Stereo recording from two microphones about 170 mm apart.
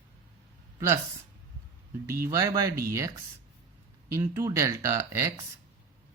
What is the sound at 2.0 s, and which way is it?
Speech, 15° right (ahead or behind).